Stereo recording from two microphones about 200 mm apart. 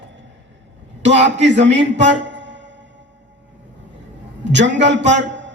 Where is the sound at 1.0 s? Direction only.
60° right (ahead or behind).